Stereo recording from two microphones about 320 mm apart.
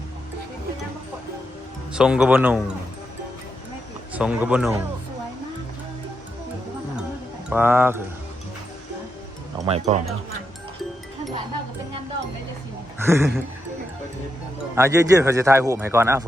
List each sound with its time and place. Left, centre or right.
1.9 s speech: centre
4.1 s speech: centre
7.5 s a man's voice: centre
9.6 s speech: centre
13.0 s a man's voice: centre
14.8 s a man's voice: centre